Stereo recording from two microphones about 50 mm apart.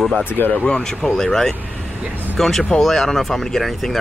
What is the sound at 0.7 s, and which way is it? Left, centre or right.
Speech, centre.